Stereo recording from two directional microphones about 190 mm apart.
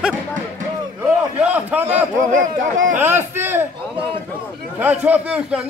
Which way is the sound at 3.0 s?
10° right (ahead or behind).